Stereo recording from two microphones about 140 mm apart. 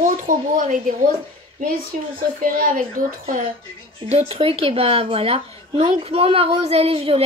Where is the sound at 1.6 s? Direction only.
90° right.